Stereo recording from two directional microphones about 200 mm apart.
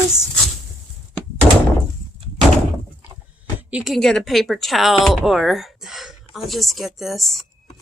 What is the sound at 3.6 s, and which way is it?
Speech, 5° right (ahead or behind).